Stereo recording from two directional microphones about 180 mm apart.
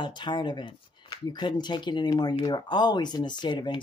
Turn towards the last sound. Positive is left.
turn(degrees=25)  # may be behind; listen again after turning